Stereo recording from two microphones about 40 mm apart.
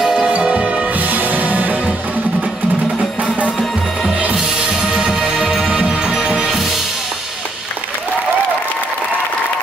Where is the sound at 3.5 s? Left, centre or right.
Centre.